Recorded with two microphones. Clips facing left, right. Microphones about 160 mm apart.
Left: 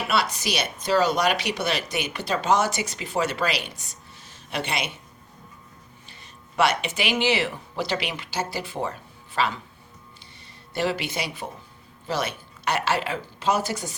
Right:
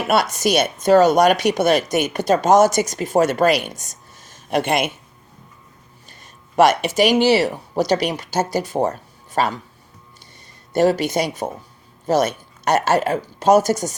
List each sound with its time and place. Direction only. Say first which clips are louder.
0.1 s a woman's voice: right 9 dB; 45° right (ahead or behind)
6.6 s speech: right 9 dB; 45° right (ahead or behind)
10.7 s a woman's voice: right 10 dB; 45° right (ahead or behind)